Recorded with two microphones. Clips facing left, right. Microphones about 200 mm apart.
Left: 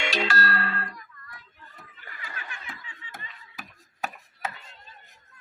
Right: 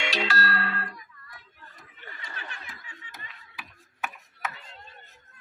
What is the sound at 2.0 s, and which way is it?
Snicker, 30° right (ahead or behind).